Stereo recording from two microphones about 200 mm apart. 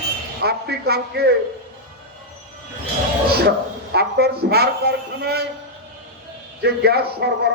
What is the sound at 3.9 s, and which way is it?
Speech, 50° right (ahead or behind).